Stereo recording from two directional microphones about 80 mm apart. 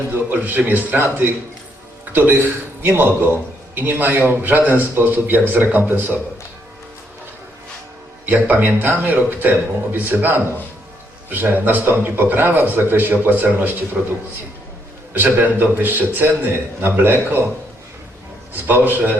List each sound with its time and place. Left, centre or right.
0.1 s a man's voice: right
8.3 s a man's voice: right
15.1 s a man's voice: right
18.5 s a man's voice: right